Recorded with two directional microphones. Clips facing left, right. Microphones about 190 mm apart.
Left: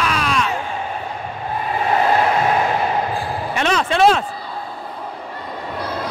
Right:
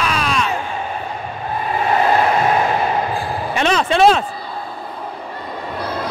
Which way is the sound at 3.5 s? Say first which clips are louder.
Right 2 dB; 25° right (ahead or behind).